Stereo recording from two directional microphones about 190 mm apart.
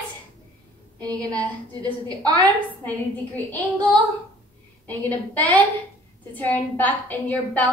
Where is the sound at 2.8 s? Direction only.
10° left (ahead or behind).